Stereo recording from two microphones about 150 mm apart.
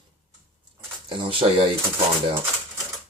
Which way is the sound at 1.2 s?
35° right (ahead or behind).